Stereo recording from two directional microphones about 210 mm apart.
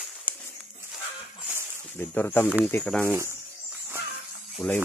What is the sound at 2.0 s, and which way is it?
Speech, 10° left (ahead or behind).